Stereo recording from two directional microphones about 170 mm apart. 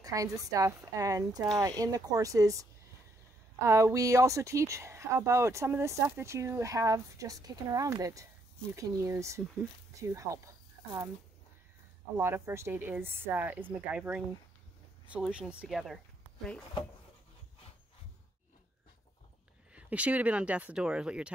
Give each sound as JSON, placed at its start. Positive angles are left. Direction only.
{"t": 0.0, "sound": "speech", "side_deg": -20}
{"t": 12.2, "sound": "speech", "side_deg": -15}
{"t": 19.7, "sound": "speech", "side_deg": -5}